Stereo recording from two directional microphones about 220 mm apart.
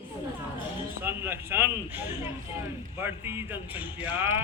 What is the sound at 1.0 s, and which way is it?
Speech, 10° right (ahead or behind).